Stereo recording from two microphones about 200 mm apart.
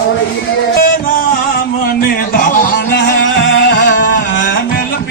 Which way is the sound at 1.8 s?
45° left (ahead or behind).